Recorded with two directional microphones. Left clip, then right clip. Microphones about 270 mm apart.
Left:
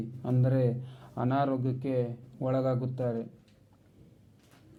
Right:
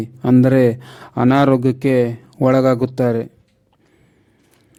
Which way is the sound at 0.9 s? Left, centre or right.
Right.